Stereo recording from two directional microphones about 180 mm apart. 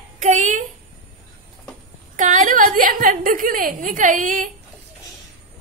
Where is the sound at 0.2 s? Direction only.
45° right (ahead or behind).